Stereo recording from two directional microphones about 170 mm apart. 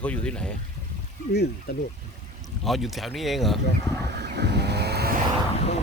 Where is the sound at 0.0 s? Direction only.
5° left (ahead or behind).